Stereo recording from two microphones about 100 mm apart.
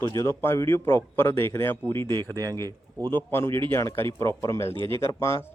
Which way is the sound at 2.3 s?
40° right (ahead or behind).